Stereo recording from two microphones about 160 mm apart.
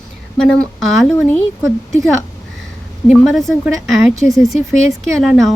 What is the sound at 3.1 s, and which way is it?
A woman's voice, centre (ahead or behind).